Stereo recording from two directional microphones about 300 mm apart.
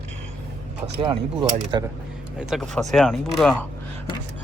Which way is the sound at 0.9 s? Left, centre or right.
Centre.